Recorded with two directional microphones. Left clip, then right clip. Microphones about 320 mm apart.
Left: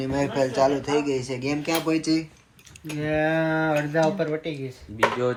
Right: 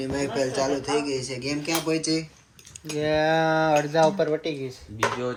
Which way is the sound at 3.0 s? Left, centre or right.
Right.